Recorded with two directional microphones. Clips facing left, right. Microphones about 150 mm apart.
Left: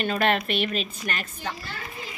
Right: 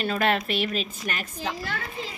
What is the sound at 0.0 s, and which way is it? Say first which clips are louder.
Speech: left 1 dB; centre (ahead or behind).